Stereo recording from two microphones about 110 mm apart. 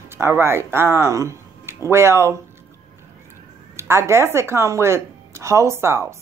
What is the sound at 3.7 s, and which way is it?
Speech, 25° right (ahead or behind).